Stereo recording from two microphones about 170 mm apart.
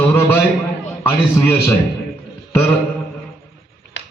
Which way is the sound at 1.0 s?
15° left (ahead or behind).